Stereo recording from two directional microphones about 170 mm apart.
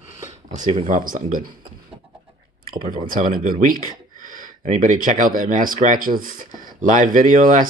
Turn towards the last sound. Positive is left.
turn(degrees=-50)  # may be behind; listen again after turning